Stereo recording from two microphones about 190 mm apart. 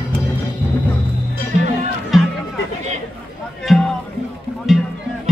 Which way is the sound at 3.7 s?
Centre (ahead or behind).